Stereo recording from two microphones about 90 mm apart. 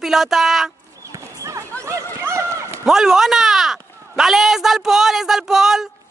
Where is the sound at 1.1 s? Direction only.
40° right (ahead or behind).